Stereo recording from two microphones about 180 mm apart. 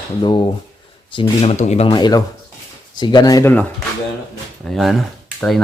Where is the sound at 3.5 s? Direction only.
10° left (ahead or behind).